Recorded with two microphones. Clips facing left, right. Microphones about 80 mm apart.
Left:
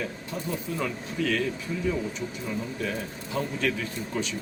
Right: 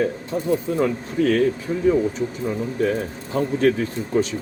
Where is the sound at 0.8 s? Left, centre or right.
Right.